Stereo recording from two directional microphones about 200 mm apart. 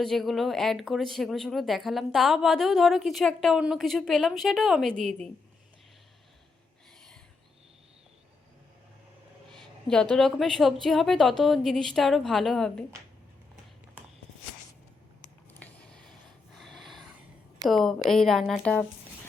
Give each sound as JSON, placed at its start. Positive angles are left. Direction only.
{"t": 0.0, "sound": "speech", "side_deg": 0}
{"t": 9.8, "sound": "speech", "side_deg": 5}
{"t": 15.5, "sound": "a sound", "side_deg": 5}
{"t": 17.7, "sound": "speech", "side_deg": 0}